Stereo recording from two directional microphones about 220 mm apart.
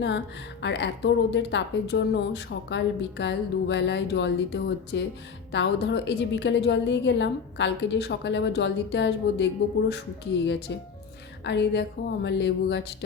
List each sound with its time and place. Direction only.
0.6 s speech: 50° left (ahead or behind)